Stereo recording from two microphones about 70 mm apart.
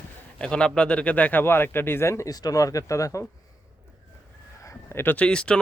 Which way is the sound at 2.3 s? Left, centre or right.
Left.